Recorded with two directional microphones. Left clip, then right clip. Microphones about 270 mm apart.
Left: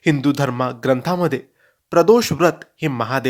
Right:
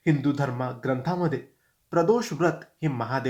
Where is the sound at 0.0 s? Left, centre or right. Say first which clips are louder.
Left 7 dB; left.